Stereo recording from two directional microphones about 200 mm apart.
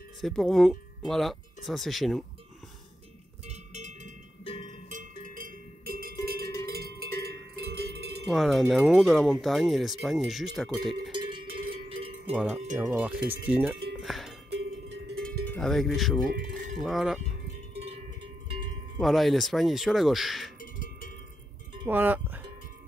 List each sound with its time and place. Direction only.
0.2 s speech: centre (ahead or behind)
3.4 s cowbell: 35° right (ahead or behind); by 8.2 s 55° right (ahead or behind)
8.3 s speech: centre (ahead or behind)
11.1 s cowbell: 25° right (ahead or behind)
12.3 s speech: 5° right (ahead or behind)
13.9 s music: centre (ahead or behind)
15.2 s speech: 5° left (ahead or behind)
16.7 s cowbell: centre (ahead or behind)
18.9 s speech: centre (ahead or behind)
20.5 s a sound: 40° left (ahead or behind)
21.8 s speech: 10° right (ahead or behind)